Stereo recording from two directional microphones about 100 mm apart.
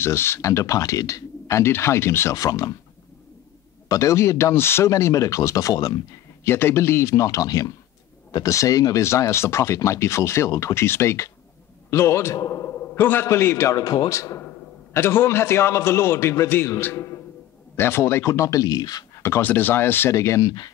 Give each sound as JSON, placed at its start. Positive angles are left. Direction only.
{"t": 0.0, "sound": "speech", "side_deg": 25}
{"t": 3.9, "sound": "speech", "side_deg": 30}
{"t": 6.4, "sound": "speech", "side_deg": 25}
{"t": 12.9, "sound": "speech", "side_deg": 20}
{"t": 19.1, "sound": "speech", "side_deg": 25}